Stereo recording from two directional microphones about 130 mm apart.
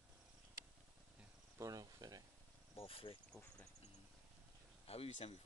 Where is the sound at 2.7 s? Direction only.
45° left (ahead or behind).